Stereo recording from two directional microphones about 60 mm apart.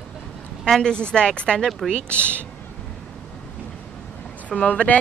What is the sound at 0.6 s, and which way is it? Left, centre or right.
Speech, centre.